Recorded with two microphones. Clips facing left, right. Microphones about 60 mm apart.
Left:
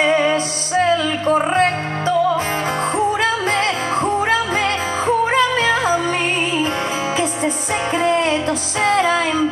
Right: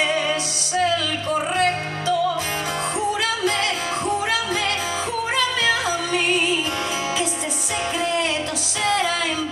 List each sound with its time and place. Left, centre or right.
0.0 s music: left
8.0 s music: left